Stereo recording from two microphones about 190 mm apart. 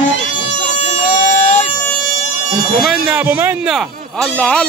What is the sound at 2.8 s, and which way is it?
Speech, 5° right (ahead or behind).